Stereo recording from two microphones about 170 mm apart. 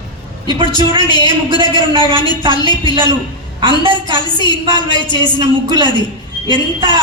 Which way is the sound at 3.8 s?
30° right (ahead or behind).